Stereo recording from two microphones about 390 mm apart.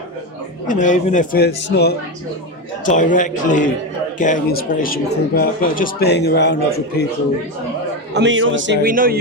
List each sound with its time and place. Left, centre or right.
0.7 s a man's voice: centre
8.1 s a man's voice: right